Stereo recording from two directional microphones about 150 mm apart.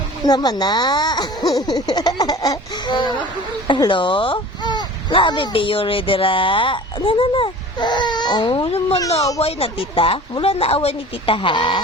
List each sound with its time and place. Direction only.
0.3 s speech: 30° left (ahead or behind)